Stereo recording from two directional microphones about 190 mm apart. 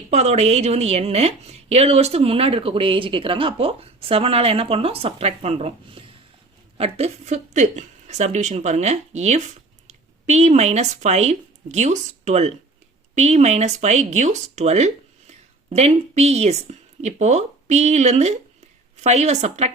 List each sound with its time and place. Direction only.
0.1 s a woman's voice: 35° right (ahead or behind)